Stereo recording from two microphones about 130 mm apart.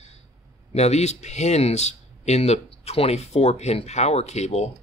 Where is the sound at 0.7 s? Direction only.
55° left (ahead or behind).